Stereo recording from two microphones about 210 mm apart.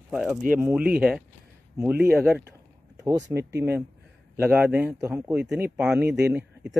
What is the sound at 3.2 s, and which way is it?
Speech, 55° right (ahead or behind).